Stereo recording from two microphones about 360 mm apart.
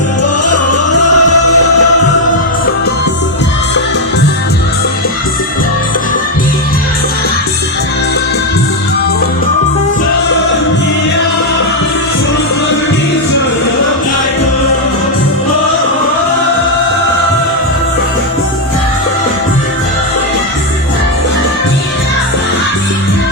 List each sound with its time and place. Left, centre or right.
0.2 s music: left